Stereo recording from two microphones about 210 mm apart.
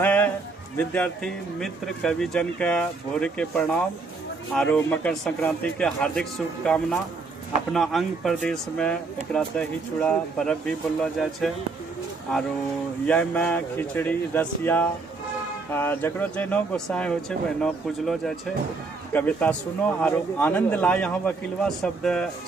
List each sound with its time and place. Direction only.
0.0 s a sound: 10° left (ahead or behind)
0.8 s speech: 5° left (ahead or behind)
13.1 s speech: 5° left (ahead or behind)